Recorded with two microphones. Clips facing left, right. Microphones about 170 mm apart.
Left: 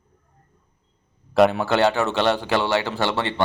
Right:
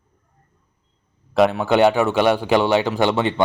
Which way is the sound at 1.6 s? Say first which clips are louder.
Right 4 dB; 15° right (ahead or behind).